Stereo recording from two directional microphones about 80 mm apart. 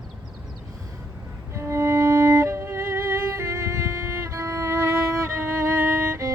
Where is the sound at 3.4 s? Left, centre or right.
Right.